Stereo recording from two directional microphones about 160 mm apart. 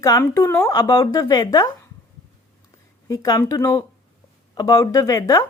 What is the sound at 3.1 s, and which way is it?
Speech, 20° left (ahead or behind).